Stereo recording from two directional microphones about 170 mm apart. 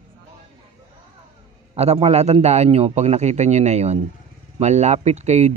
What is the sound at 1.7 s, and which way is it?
Speech, 40° right (ahead or behind).